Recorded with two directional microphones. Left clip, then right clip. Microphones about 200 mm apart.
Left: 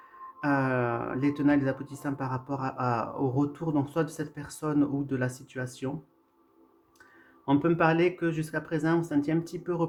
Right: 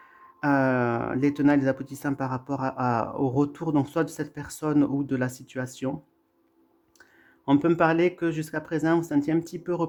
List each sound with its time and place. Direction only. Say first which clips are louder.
0.3 s speech: right 4 dB; 45° right (ahead or behind)
7.4 s speech: right 3 dB; 35° right (ahead or behind)